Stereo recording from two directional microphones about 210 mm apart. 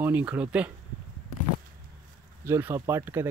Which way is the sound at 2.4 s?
10° right (ahead or behind).